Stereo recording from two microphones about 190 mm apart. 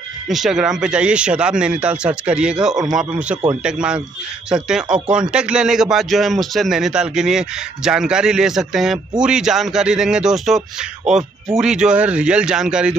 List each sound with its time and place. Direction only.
0.3 s speech: centre (ahead or behind)